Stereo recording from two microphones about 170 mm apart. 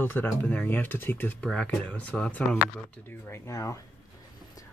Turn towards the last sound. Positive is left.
turn(degrees=20)  # may be behind; listen again after turning